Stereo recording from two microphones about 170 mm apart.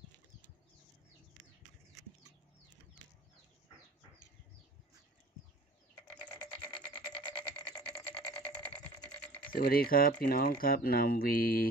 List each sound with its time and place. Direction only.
7.2 s music: 25° left (ahead or behind)
7.8 s a sound: 5° left (ahead or behind)
9.5 s speech: 60° left (ahead or behind)